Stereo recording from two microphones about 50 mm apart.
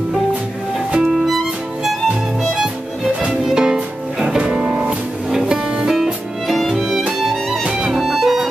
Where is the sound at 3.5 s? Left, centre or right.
Centre.